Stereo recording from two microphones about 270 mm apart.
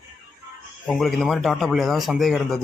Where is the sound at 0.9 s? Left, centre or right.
Centre.